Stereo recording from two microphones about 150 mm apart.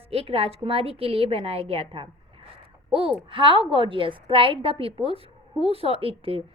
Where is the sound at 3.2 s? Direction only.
35° right (ahead or behind).